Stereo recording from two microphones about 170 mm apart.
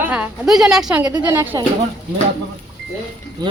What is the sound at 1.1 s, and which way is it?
Speech, 25° right (ahead or behind).